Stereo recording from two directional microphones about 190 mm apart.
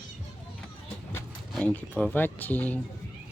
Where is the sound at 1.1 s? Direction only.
10° left (ahead or behind).